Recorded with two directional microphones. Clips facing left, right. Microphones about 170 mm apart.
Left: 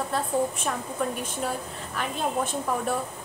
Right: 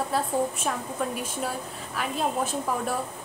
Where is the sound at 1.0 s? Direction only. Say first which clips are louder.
Left 1 dB; centre (ahead or behind).